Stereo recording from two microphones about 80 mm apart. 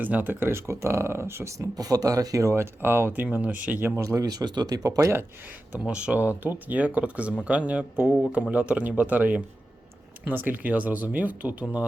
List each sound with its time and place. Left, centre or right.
0.0 s speech: right
2.5 s speech: right
5.7 s speech: centre